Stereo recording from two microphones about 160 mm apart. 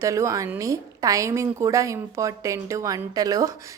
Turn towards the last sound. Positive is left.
turn(degrees=-20)  # may be behind; listen again after turning